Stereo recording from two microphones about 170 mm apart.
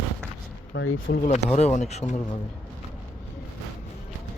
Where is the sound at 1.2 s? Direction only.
40° left (ahead or behind).